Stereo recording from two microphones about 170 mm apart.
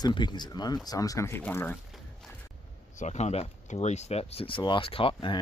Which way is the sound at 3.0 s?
40° left (ahead or behind).